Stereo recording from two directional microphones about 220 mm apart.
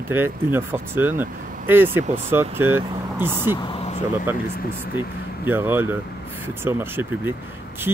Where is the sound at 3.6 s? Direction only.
25° left (ahead or behind).